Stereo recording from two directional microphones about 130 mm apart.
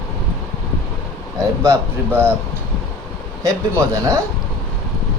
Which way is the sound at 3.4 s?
25° right (ahead or behind).